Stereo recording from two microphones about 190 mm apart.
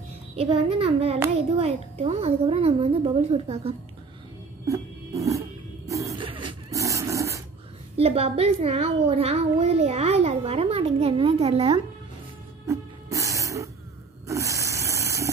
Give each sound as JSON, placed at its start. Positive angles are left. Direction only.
{"t": 0.4, "sound": "a child's voice", "side_deg": -30}
{"t": 4.6, "sound": "music", "side_deg": -15}
{"t": 5.9, "sound": "a sound", "side_deg": -15}
{"t": 8.0, "sound": "a child's voice", "side_deg": -30}
{"t": 12.6, "sound": "music", "side_deg": -15}
{"t": 14.2, "sound": "a sound", "side_deg": -15}